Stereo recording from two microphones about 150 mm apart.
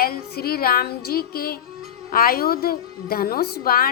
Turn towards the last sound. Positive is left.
turn(degrees=80)